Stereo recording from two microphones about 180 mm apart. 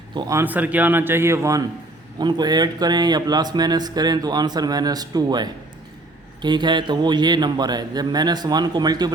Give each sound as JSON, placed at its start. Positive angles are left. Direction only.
{"t": 0.1, "sound": "a man's voice", "side_deg": -20}